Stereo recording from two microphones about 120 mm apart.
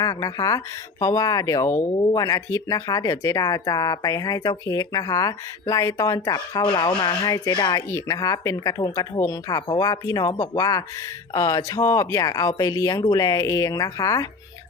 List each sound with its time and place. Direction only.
0.0 s speech: 30° left (ahead or behind)